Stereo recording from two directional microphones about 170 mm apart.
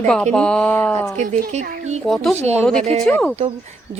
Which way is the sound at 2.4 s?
40° right (ahead or behind).